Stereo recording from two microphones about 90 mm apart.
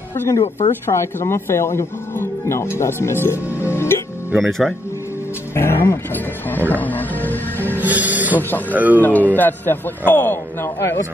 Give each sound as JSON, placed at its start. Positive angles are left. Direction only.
{"t": 0.1, "sound": "speech", "side_deg": 30}
{"t": 4.4, "sound": "speech", "side_deg": 5}
{"t": 5.5, "sound": "speech", "side_deg": 30}
{"t": 6.7, "sound": "music", "side_deg": 20}
{"t": 7.8, "sound": "music", "side_deg": -20}
{"t": 8.4, "sound": "speech", "side_deg": 20}
{"t": 8.7, "sound": "speech", "side_deg": -20}
{"t": 9.3, "sound": "speech", "side_deg": 20}